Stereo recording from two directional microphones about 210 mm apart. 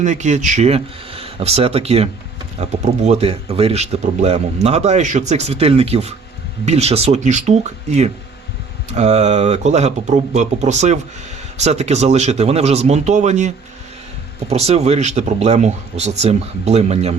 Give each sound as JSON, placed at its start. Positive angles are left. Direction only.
{"t": 0.0, "sound": "speech", "side_deg": -35}
{"t": 14.5, "sound": "speech", "side_deg": -30}